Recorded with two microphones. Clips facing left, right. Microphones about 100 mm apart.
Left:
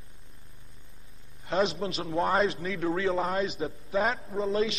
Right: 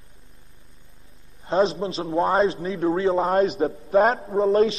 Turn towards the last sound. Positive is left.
turn(degrees=-40)  # may be behind; listen again after turning